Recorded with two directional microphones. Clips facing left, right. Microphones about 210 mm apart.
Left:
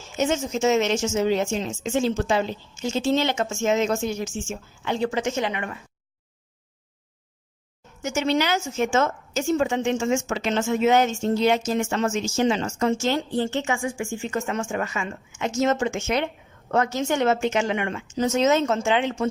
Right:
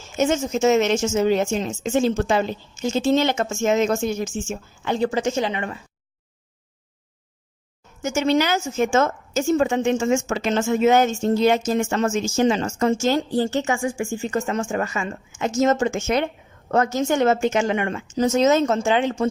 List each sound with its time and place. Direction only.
0.2 s a woman's voice: 45° right (ahead or behind); by 5.7 s 30° right (ahead or behind)
8.0 s a woman's voice: 45° right (ahead or behind)